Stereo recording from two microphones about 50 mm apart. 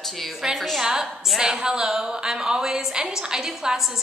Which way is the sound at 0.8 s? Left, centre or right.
Centre.